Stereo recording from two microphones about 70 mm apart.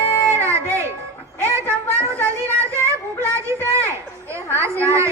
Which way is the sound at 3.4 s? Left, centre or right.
Right.